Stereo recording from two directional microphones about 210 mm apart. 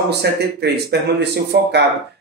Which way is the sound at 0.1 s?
50° right (ahead or behind).